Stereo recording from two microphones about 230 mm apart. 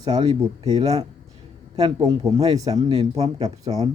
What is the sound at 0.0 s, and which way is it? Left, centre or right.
Speech, right.